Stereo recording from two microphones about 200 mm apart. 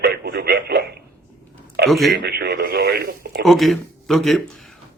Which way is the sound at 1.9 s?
Centre (ahead or behind).